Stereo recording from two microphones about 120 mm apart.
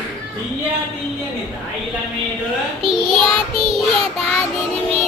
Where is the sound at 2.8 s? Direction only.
50° right (ahead or behind).